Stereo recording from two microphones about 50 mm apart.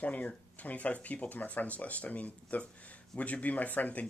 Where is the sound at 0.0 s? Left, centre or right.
Left.